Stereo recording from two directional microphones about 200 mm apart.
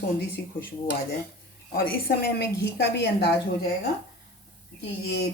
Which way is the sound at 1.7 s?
50° left (ahead or behind).